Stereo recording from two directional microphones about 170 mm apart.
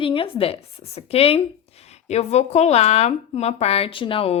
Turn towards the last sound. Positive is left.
turn(degrees=30)  # may be behind; listen again after turning